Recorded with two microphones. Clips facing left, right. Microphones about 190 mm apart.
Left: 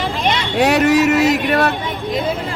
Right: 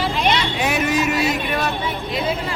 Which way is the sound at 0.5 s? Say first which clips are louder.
Left 7 dB; 65° left (ahead or behind).